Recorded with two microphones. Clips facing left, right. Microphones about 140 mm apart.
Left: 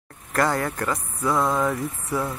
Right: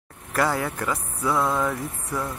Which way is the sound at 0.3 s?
5° right (ahead or behind).